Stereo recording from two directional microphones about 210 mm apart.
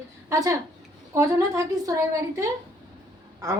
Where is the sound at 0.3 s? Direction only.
15° right (ahead or behind).